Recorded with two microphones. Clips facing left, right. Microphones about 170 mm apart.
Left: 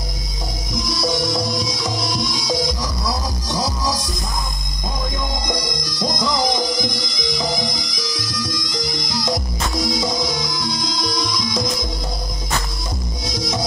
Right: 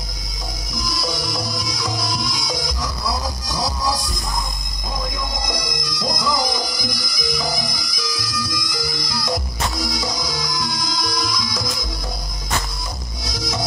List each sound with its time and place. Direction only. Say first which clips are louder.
0.7 s music: left 5 dB; 25° left (ahead or behind)
5.9 s music: left 1 dB; 25° left (ahead or behind)
13.3 s music: left 2 dB; 20° left (ahead or behind)